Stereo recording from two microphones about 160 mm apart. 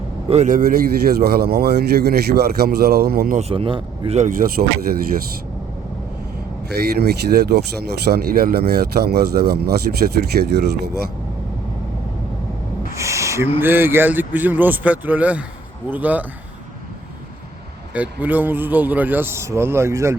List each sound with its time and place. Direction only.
0.3 s a man's voice: 50° right (ahead or behind); by 3.3 s 75° right (ahead or behind)
3.3 s a man's voice: 35° right (ahead or behind)
6.7 s speech: 90° right
12.9 s owl: 20° right (ahead or behind)
13.6 s a man's voice: 15° right (ahead or behind)
17.9 s a man's voice: 10° right (ahead or behind)